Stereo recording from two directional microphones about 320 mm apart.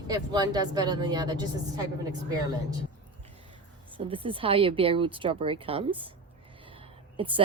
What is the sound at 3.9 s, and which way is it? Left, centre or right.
A woman's voice, centre.